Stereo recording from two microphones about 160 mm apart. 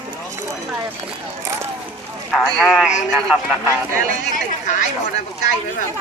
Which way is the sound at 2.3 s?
Centre (ahead or behind).